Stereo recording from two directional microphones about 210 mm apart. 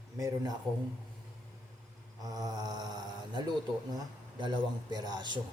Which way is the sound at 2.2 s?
20° right (ahead or behind).